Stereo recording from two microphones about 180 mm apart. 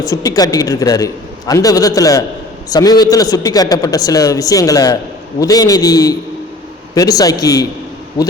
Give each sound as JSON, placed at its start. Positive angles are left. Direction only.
{"t": 0.0, "sound": "a man's voice", "side_deg": 20}